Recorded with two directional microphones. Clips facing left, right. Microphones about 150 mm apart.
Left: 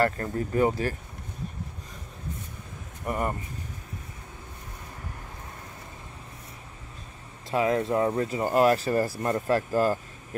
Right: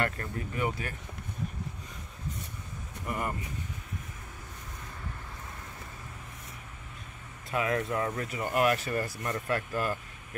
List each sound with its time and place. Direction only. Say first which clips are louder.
0.0 s speech: left 7 dB; 35° left (ahead or behind)
3.1 s speech: left 5 dB; 35° left (ahead or behind)
7.5 s speech: left 6 dB; 30° left (ahead or behind)